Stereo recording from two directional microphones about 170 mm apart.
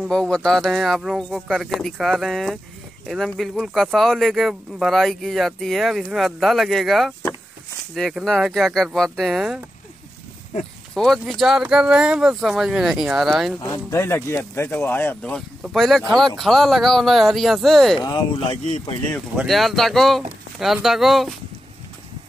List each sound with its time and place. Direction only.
0.0 s speech: 5° left (ahead or behind)
11.0 s speech: centre (ahead or behind)
13.6 s speech: 20° left (ahead or behind); by 18.0 s centre (ahead or behind)
18.0 s speech: 25° left (ahead or behind)
19.3 s speech: centre (ahead or behind)